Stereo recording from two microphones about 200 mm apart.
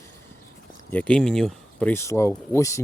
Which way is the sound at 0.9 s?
5° left (ahead or behind).